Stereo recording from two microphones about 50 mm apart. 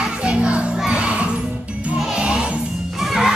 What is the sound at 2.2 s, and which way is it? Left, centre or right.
Music, centre.